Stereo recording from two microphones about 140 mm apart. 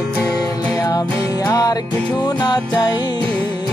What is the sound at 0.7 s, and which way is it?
Music, 25° left (ahead or behind).